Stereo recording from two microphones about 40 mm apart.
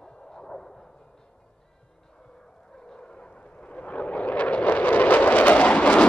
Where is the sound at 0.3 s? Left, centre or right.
Centre.